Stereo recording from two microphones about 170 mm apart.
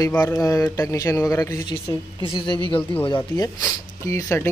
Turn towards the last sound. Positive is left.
turn(degrees=15)  # may be behind; listen again after turning